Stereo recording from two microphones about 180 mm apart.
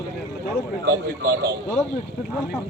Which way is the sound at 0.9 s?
60° right (ahead or behind).